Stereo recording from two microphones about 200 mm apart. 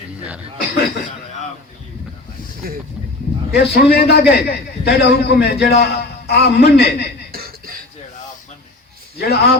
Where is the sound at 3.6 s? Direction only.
50° left (ahead or behind).